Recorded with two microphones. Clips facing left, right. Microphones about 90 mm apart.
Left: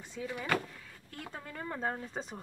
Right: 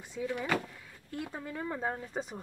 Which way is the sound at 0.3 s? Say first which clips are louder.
Right 1 dB; centre (ahead or behind).